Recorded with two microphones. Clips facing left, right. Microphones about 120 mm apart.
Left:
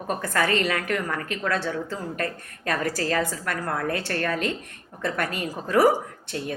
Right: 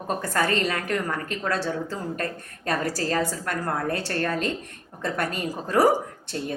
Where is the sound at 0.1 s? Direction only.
35° right (ahead or behind).